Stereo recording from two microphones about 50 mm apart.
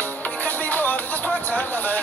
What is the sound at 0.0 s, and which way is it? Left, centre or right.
Music, left.